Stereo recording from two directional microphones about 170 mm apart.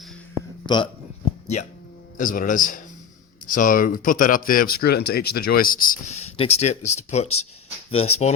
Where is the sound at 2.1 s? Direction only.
55° left (ahead or behind).